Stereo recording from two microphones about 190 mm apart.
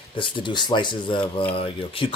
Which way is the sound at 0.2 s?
25° left (ahead or behind).